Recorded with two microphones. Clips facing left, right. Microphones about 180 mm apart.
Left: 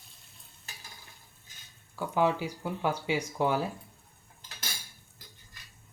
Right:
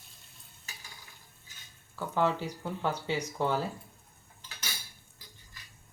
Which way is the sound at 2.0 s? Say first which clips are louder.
Left 2 dB; 10° left (ahead or behind).